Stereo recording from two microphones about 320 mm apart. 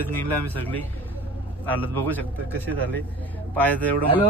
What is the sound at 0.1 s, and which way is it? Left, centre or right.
Speech, right.